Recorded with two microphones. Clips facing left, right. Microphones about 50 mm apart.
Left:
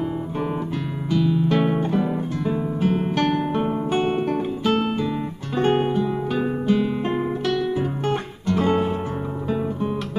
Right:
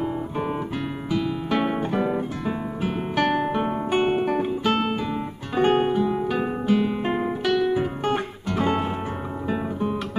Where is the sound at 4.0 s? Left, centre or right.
Centre.